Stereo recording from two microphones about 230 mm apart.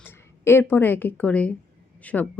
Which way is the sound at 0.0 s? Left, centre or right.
Centre.